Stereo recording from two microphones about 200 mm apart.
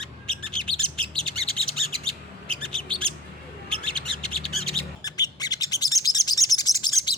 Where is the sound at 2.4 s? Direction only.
5° left (ahead or behind).